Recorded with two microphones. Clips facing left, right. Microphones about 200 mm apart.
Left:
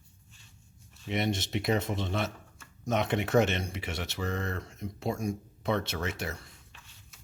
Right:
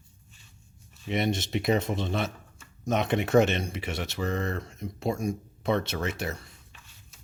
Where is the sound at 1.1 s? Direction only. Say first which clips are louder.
Right 3 dB; 20° right (ahead or behind).